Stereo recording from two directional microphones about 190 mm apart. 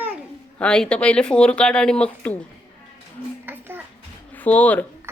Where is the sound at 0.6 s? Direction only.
5° left (ahead or behind).